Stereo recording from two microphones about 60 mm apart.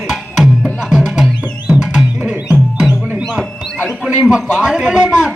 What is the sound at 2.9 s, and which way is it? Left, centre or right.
Music, centre.